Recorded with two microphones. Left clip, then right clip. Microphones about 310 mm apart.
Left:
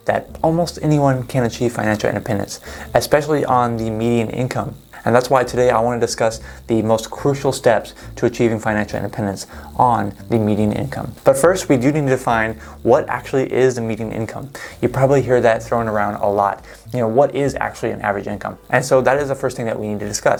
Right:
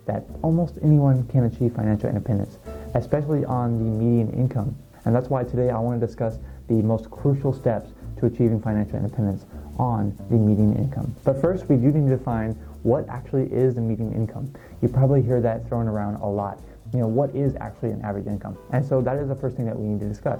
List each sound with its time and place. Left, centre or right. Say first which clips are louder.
0.0 s speech: left 10 dB; centre